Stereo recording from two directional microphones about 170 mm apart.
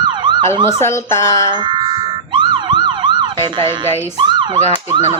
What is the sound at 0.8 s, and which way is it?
Speech, 15° left (ahead or behind).